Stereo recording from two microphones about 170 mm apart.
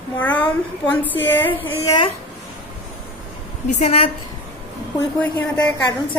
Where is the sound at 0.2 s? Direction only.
10° left (ahead or behind).